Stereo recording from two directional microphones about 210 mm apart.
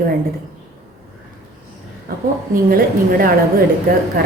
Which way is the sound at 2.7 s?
45° right (ahead or behind).